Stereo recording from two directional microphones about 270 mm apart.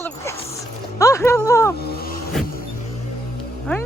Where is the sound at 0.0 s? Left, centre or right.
Centre.